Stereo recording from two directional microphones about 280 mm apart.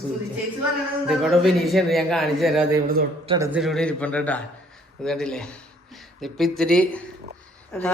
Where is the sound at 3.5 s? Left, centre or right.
Centre.